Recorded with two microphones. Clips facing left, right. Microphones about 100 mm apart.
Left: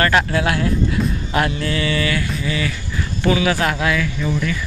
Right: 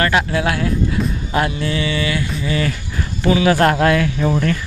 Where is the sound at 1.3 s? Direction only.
20° right (ahead or behind).